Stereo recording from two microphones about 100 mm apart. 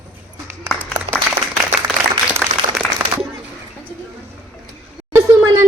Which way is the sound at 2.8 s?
10° left (ahead or behind).